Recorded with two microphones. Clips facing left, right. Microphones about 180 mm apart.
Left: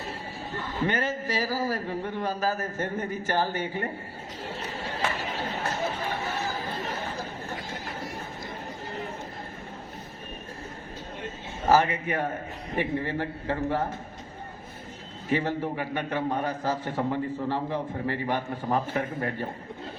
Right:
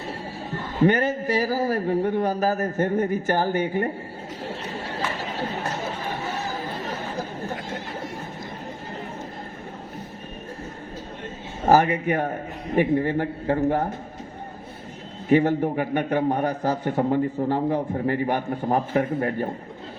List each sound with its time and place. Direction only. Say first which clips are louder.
0.9 s a man's voice: right 8 dB; 55° right (ahead or behind)
11.7 s a man's voice: right 4 dB; 45° right (ahead or behind)
15.3 s a man's voice: right 8 dB; 45° right (ahead or behind)